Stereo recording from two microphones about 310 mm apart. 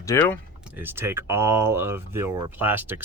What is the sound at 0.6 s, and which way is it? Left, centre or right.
Speech, centre.